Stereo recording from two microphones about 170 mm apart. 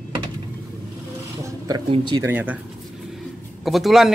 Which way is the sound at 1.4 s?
20° right (ahead or behind).